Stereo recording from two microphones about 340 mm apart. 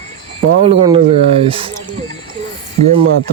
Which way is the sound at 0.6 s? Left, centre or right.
Centre.